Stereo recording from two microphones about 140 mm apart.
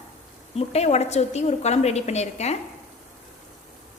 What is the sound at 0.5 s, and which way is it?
A woman's voice, 50° left (ahead or behind).